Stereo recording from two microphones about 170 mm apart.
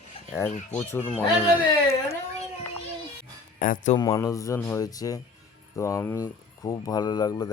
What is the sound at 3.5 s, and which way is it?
Speech, 50° left (ahead or behind).